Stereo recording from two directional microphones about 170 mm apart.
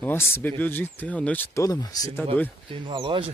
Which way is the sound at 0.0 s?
15° left (ahead or behind).